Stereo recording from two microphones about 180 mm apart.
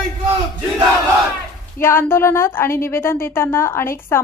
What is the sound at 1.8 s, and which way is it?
A woman's voice, 10° left (ahead or behind).